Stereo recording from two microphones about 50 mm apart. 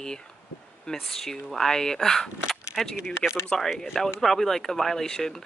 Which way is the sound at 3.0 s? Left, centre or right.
Centre.